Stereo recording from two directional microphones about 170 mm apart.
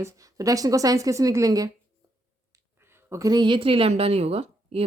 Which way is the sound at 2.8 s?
15° right (ahead or behind).